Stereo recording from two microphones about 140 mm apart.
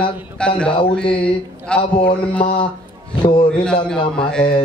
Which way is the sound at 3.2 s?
35° left (ahead or behind).